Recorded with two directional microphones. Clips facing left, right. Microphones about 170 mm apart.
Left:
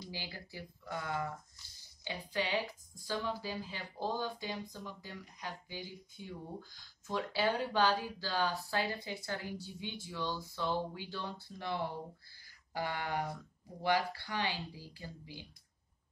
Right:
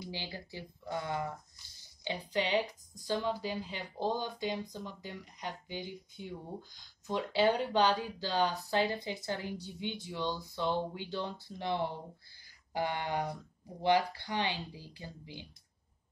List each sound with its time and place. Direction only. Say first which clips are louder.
0.1 s speech: right 3 dB; 25° right (ahead or behind)